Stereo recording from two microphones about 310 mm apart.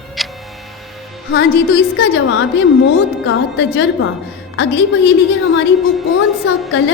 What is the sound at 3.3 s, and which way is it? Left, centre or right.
Music, left.